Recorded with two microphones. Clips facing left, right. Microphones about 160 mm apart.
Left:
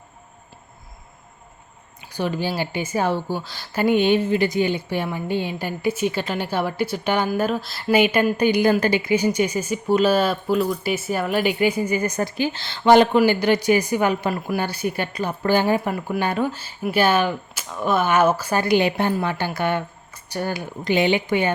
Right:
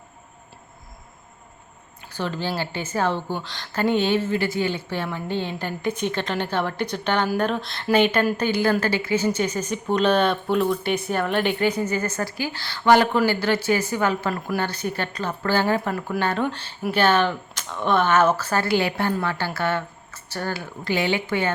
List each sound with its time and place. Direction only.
2.1 s a woman's voice: 15° left (ahead or behind)